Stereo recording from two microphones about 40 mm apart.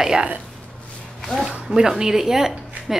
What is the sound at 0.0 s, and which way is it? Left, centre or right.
Speech, centre.